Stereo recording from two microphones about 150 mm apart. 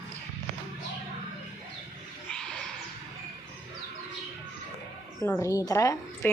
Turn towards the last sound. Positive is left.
turn(degrees=20)  # may be behind; listen again after turning